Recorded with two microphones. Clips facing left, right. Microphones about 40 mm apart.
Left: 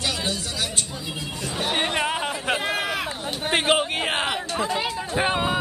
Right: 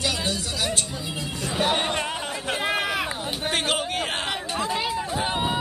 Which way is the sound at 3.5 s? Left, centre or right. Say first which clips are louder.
Left 5 dB; left.